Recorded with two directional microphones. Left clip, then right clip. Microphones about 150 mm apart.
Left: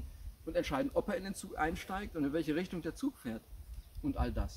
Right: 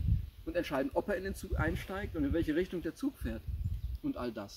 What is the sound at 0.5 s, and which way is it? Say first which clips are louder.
Speech: right 1 dB; 20° left (ahead or behind).